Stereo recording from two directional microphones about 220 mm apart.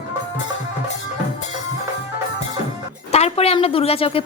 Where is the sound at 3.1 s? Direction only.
30° left (ahead or behind).